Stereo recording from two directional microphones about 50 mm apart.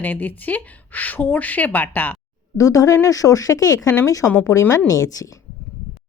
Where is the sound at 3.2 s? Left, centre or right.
Left.